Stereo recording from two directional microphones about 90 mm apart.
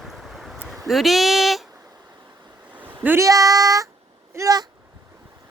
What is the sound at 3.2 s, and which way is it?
Child singing, 40° right (ahead or behind).